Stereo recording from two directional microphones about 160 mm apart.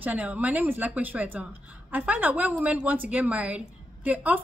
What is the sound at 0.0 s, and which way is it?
A woman's voice, 10° right (ahead or behind).